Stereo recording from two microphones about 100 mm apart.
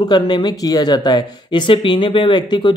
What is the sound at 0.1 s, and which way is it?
Speech, 50° left (ahead or behind).